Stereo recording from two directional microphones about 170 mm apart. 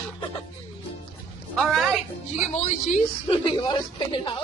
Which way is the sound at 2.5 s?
40° left (ahead or behind).